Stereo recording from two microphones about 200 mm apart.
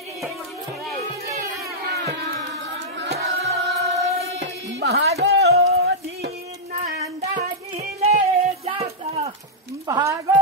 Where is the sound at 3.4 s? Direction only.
35° right (ahead or behind).